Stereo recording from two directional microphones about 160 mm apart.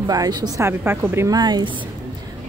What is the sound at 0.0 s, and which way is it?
A woman's voice, 25° right (ahead or behind).